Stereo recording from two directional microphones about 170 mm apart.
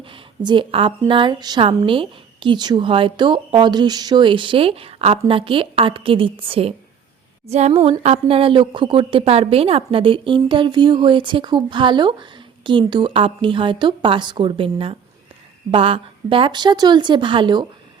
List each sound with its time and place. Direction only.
0.0 s a woman's voice: 30° right (ahead or behind)
7.4 s a sound: 40° right (ahead or behind)
7.7 s a woman's voice: 35° right (ahead or behind)